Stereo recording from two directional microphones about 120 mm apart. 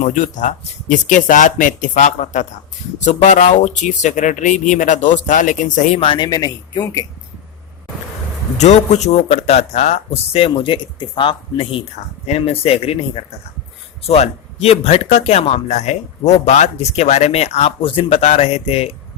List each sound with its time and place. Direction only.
0.0 s speech: 90° left
6.0 s speech: 45° left (ahead or behind)
6.2 s speech: 35° left (ahead or behind)
8.5 s speech: 70° left (ahead or behind); by 11.8 s 45° left (ahead or behind)
12.2 s speech: 60° left (ahead or behind)
17.8 s speech: 50° left (ahead or behind)